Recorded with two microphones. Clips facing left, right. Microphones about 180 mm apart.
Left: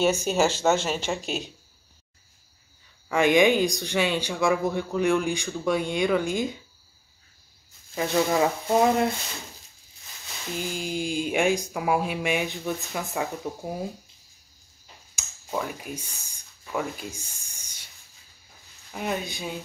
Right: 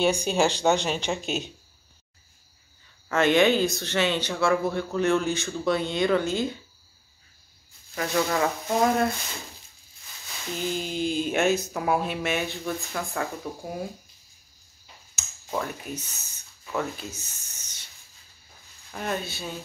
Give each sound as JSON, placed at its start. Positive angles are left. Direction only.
{"t": 0.0, "sound": "speech", "side_deg": 5}
{"t": 3.1, "sound": "speech", "side_deg": 10}
{"t": 7.9, "sound": "speech", "side_deg": 20}
{"t": 10.6, "sound": "speech", "side_deg": 10}
{"t": 15.1, "sound": "a sound", "side_deg": 10}
{"t": 18.9, "sound": "speech", "side_deg": 10}